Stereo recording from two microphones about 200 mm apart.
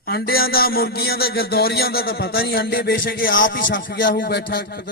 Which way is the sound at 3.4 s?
65° left (ahead or behind).